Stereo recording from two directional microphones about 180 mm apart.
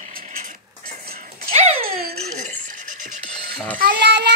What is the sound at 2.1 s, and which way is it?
Music, 40° right (ahead or behind).